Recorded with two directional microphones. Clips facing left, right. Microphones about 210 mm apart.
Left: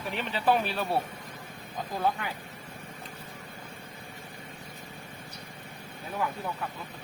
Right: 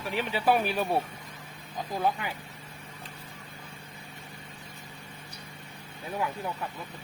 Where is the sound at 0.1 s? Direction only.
5° right (ahead or behind).